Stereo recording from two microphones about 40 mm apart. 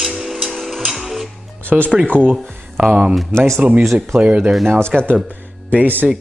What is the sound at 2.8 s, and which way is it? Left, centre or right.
Speech, centre.